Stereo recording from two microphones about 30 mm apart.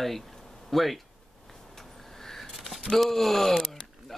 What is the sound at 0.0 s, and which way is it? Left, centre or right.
Speech, centre.